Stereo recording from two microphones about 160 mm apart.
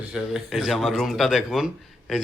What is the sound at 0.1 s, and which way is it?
A man's voice, centre (ahead or behind).